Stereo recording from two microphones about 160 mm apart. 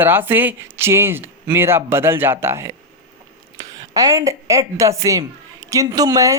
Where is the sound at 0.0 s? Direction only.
15° right (ahead or behind).